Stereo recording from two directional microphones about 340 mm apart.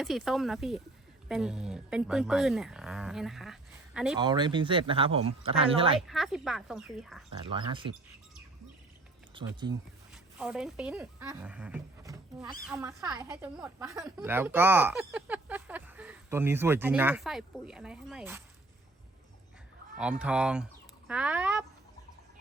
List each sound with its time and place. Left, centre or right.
0.0 s a woman's voice: centre
4.2 s speech: centre
6.0 s a woman's voice: centre
7.4 s speech: centre
9.3 s speech: centre
10.1 s a woman's voice: centre
20.0 s a woman's voice: centre